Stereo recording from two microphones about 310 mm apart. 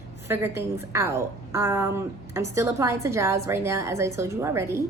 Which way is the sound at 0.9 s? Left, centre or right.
Centre.